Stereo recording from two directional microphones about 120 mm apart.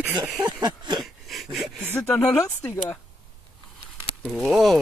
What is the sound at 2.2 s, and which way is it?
Speech, 25° left (ahead or behind).